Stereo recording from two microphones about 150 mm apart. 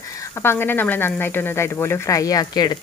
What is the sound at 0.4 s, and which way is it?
A woman's voice, 15° left (ahead or behind).